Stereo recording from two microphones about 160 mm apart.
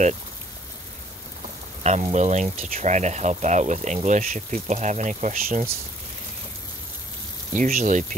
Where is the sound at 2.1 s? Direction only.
45° right (ahead or behind).